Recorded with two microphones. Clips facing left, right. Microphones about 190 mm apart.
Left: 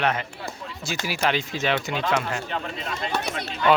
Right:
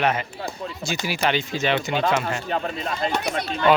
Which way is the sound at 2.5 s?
40° right (ahead or behind).